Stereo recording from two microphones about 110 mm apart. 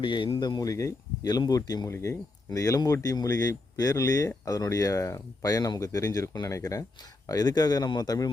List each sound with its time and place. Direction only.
0.0 s speech: 50° left (ahead or behind)